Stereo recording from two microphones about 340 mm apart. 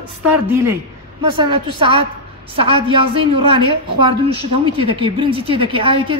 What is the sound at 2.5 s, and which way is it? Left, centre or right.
Speech, right.